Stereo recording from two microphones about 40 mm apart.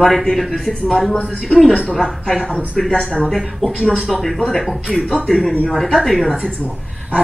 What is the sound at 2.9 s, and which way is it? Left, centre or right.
A woman's voice, centre.